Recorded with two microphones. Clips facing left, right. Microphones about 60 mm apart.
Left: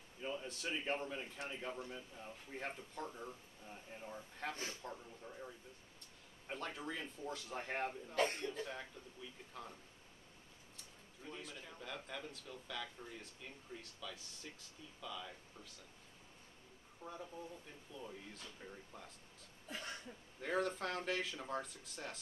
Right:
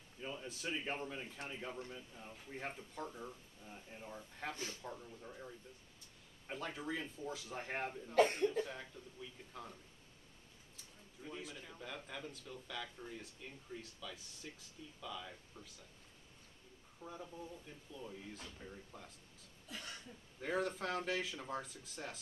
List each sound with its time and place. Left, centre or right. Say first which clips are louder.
0.2 s a man's voice: left 1 dB; centre
10.8 s a man's voice: right 3 dB; centre
17.0 s a man's voice: even; centre
19.7 s cough: left 2 dB; left
20.3 s a man's voice: even; centre